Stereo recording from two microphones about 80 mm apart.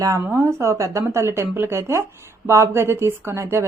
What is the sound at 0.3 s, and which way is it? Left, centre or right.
A woman's voice, right.